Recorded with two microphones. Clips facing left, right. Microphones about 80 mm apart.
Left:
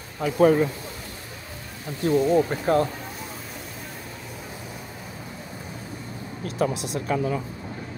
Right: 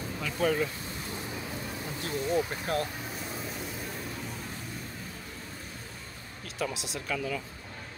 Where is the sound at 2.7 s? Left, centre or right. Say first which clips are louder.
Left 11 dB; left.